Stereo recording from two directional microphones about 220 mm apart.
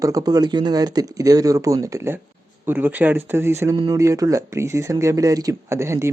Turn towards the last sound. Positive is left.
turn(degrees=-10)  # may be behind; listen again after turning